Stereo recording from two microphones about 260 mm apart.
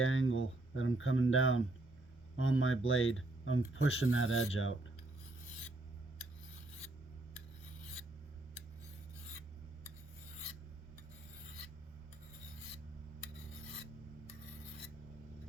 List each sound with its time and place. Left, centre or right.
0.0 s speech: left